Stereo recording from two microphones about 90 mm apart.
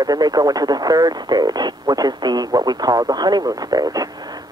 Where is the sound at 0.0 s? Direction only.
45° right (ahead or behind).